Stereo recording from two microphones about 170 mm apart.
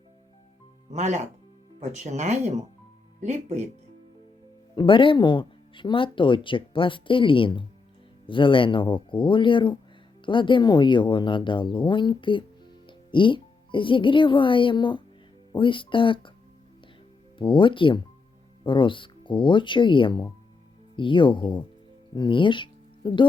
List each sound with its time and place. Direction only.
0.9 s speech: 45° right (ahead or behind)
4.7 s speech: 30° left (ahead or behind)
17.3 s speech: 30° left (ahead or behind)